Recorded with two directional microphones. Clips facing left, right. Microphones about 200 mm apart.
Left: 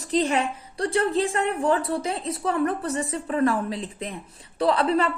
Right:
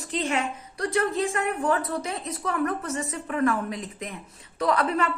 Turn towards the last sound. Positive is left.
turn(degrees=30)  # may be behind; listen again after turning